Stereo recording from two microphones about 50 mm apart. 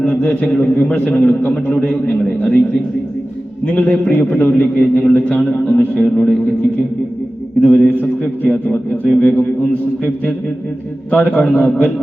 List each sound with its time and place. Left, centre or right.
0.0 s a sound: centre
0.5 s a man's voice: left
1.4 s a man's voice: left
1.7 s a man's voice: left
3.7 s a man's voice: left
5.1 s a man's voice: left
5.6 s a man's voice: left
7.6 s a man's voice: left
9.2 s speech: left
11.1 s a man's voice: left